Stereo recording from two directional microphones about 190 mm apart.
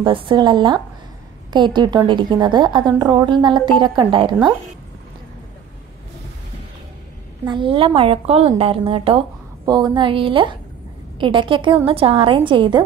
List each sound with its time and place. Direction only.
0.0 s a woman's voice: 25° right (ahead or behind)
7.4 s a woman's voice: 25° right (ahead or behind)